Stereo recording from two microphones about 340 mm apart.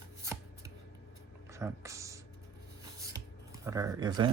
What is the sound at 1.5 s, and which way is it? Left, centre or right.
Music, centre.